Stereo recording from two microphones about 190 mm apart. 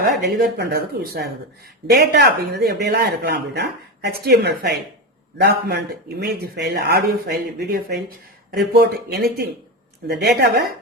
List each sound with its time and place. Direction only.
0.2 s speech: 60° right (ahead or behind)